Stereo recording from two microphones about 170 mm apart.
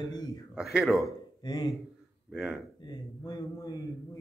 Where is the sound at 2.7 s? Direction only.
25° left (ahead or behind).